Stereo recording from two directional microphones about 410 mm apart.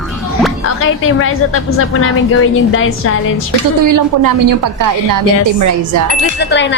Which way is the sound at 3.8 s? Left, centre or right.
Right.